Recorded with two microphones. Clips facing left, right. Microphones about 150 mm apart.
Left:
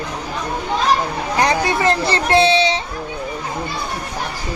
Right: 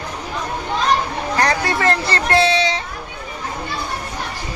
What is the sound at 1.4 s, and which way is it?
Speech, 20° left (ahead or behind).